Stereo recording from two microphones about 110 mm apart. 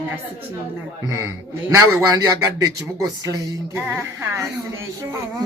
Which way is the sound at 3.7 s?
20° right (ahead or behind).